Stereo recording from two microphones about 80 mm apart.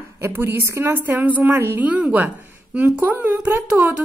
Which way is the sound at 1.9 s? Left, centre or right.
Centre.